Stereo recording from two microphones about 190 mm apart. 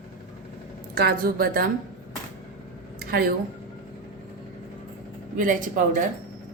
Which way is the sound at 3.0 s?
50° right (ahead or behind).